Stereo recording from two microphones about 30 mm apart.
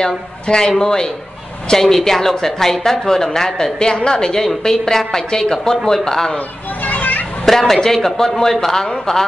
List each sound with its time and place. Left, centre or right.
0.0 s a woman's voice: left
3.8 s a woman's voice: left
4.6 s a woman's voice: centre
6.8 s children playing: left
7.4 s a woman's voice: centre